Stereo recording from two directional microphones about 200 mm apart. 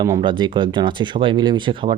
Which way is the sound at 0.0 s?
20° right (ahead or behind).